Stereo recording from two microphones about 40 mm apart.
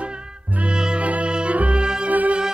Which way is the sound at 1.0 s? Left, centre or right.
Right.